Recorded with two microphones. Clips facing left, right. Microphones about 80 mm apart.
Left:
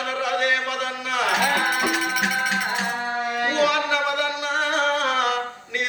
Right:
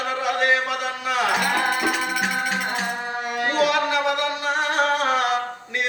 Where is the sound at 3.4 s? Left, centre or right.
Right.